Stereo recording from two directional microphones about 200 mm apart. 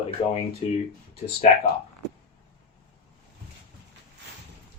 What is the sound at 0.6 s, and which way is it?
Speech, 30° left (ahead or behind).